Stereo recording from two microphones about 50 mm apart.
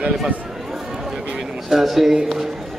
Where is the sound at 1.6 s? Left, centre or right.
Centre.